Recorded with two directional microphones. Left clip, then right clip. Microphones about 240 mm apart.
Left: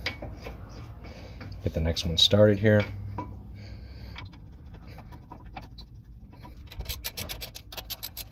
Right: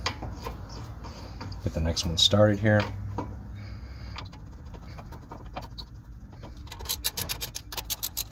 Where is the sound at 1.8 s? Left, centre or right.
Left.